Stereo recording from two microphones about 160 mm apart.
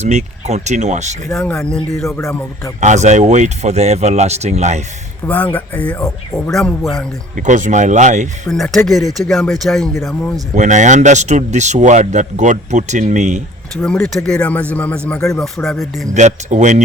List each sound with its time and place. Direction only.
0.0 s speech: 45° right (ahead or behind)
1.3 s speech: 5° left (ahead or behind)
2.0 s speech: 15° left (ahead or behind)
2.8 s speech: 45° right (ahead or behind)
5.2 s a man's voice: 10° left (ahead or behind)
7.3 s speech: 50° right (ahead or behind)
8.4 s a man's voice: centre (ahead or behind)
10.5 s speech: 50° right (ahead or behind)
13.8 s a man's voice: 5° left (ahead or behind)
16.1 s speech: 50° right (ahead or behind)